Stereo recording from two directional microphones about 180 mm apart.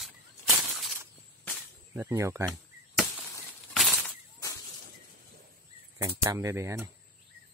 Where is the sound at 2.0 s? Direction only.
10° right (ahead or behind).